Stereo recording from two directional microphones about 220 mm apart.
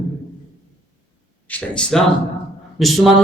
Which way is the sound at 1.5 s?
5° left (ahead or behind).